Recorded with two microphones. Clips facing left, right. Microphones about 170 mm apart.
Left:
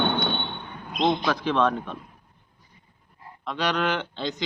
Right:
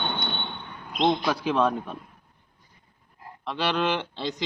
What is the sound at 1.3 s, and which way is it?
Speech, 10° right (ahead or behind).